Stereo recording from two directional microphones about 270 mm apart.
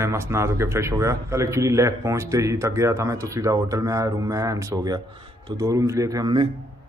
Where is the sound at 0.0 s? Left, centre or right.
Centre.